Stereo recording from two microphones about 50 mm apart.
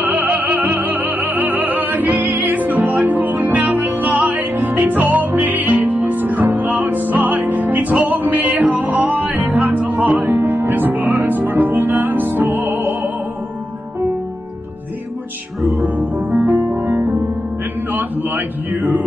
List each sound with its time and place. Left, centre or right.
0.1 s music: right
15.6 s music: centre
16.3 s music: right